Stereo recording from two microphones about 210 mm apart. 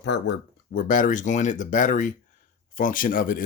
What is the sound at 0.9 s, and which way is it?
Speech, 40° left (ahead or behind).